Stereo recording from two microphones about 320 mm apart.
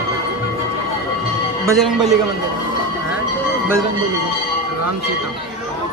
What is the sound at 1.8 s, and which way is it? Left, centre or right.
Speech, centre.